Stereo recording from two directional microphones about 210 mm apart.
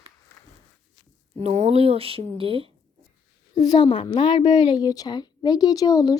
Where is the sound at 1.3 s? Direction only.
30° right (ahead or behind).